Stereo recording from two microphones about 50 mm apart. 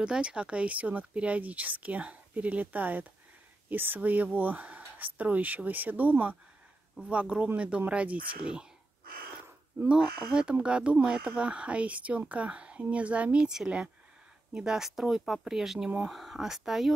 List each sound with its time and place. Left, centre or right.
0.0 s speech: centre; by 6.3 s right
7.0 s speech: right
9.8 s speech: centre